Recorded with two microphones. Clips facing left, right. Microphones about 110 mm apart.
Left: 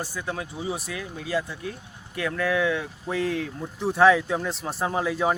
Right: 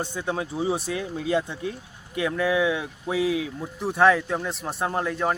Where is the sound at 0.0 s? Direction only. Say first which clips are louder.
Right 3 dB; 25° right (ahead or behind).